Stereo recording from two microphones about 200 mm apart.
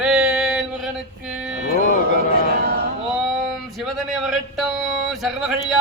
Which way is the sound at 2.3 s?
50° right (ahead or behind).